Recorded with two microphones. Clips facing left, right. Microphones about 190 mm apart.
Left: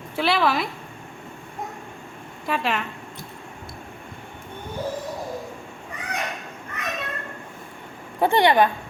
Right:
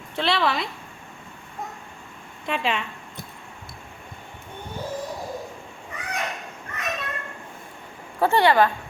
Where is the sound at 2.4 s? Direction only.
Centre (ahead or behind).